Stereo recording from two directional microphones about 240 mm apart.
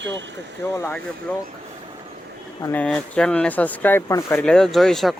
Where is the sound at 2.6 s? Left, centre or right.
Centre.